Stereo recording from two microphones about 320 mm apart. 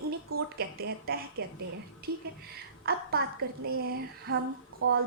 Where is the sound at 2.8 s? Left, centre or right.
Right.